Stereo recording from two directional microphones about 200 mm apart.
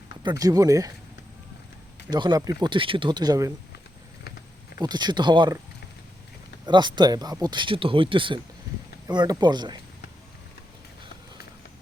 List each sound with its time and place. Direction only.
0.2 s speech: 20° right (ahead or behind)
2.0 s speech: 20° right (ahead or behind)
4.8 s speech: 20° right (ahead or behind)
6.7 s speech: 20° right (ahead or behind)